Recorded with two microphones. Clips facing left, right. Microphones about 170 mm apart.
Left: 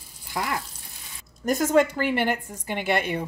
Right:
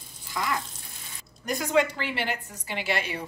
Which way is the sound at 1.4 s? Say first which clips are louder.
Left 4 dB; 45° left (ahead or behind).